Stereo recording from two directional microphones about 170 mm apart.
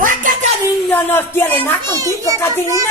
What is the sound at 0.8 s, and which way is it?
Speech, 15° left (ahead or behind).